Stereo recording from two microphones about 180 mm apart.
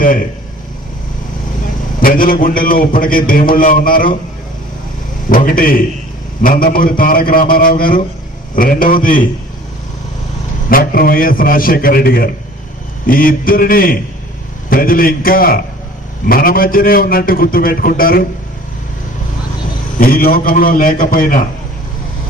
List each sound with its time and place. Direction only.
2.0 s a man's voice: 50° left (ahead or behind)
5.3 s a man's voice: 50° left (ahead or behind)
10.7 s a man's voice: 55° left (ahead or behind)
20.0 s a man's voice: 55° left (ahead or behind)